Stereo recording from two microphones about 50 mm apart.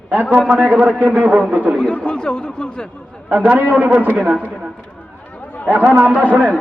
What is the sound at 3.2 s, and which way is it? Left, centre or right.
Speech, right.